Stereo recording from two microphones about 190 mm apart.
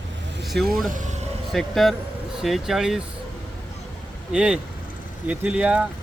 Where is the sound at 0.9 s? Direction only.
40° right (ahead or behind).